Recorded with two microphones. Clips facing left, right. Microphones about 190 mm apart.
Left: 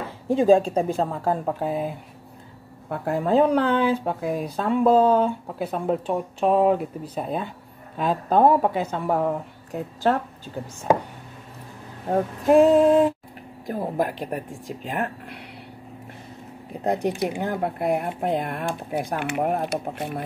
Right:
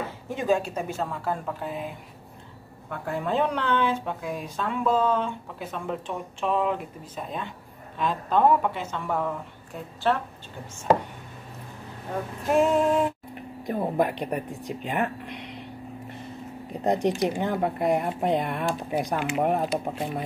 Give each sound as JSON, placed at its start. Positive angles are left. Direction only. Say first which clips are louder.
{"t": 0.3, "sound": "speech", "louder": "left 8 dB", "side_deg": 30}
{"t": 12.1, "sound": "speech", "louder": "left 8 dB", "side_deg": 35}
{"t": 13.7, "sound": "speech", "louder": "even", "side_deg": 5}
{"t": 16.8, "sound": "speech", "louder": "even", "side_deg": 10}